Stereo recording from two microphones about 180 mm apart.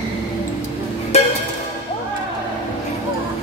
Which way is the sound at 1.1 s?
35° left (ahead or behind).